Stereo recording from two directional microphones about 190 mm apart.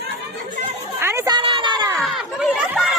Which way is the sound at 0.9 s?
15° right (ahead or behind).